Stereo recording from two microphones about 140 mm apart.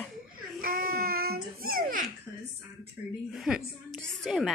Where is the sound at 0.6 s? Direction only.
90° right.